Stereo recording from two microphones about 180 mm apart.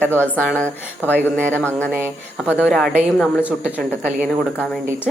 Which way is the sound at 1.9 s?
10° right (ahead or behind).